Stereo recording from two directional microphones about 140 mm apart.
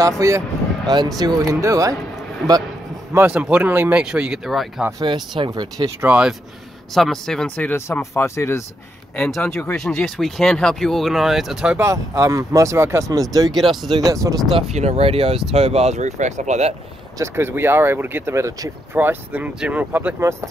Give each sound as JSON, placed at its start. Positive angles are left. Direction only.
{"t": 0.2, "sound": "speech", "side_deg": -20}
{"t": 3.1, "sound": "speech", "side_deg": -15}
{"t": 4.9, "sound": "speech", "side_deg": -30}
{"t": 5.9, "sound": "speech", "side_deg": -10}
{"t": 6.9, "sound": "speech", "side_deg": 0}
{"t": 9.1, "sound": "speech", "side_deg": 5}
{"t": 11.8, "sound": "speech", "side_deg": -25}
{"t": 13.5, "sound": "speech", "side_deg": 0}
{"t": 13.8, "sound": "speech", "side_deg": -30}
{"t": 14.5, "sound": "speech", "side_deg": -50}
{"t": 17.2, "sound": "speech", "side_deg": -15}
{"t": 18.9, "sound": "speech", "side_deg": -10}